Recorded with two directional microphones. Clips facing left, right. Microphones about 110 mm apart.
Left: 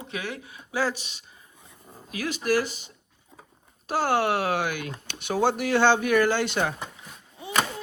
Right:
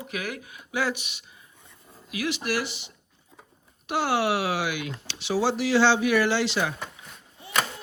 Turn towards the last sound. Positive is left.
turn(degrees=0)  # may be behind; listen again after turning